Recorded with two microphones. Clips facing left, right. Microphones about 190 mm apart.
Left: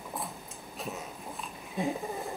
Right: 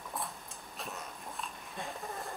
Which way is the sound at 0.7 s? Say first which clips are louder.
Left 5 dB; centre (ahead or behind).